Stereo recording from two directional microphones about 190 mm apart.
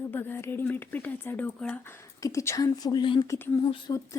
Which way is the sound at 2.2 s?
15° left (ahead or behind).